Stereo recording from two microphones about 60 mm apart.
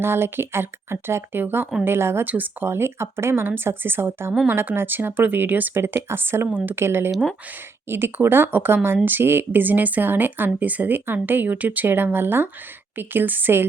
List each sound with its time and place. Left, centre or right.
0.0 s speech: right
2.2 s speech: right
5.7 s speech: right